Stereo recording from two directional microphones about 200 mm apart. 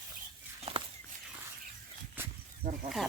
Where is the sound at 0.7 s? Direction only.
30° right (ahead or behind).